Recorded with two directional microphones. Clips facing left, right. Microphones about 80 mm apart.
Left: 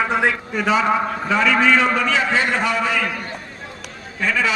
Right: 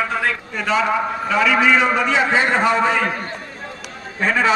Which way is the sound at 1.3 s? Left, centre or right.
Centre.